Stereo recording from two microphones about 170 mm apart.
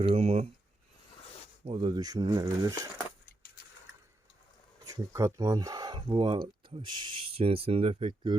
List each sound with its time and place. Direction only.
0.0 s speech: 35° right (ahead or behind)
1.6 s speech: 30° right (ahead or behind)
3.2 s a sound: 60° left (ahead or behind)
4.9 s speech: 20° right (ahead or behind)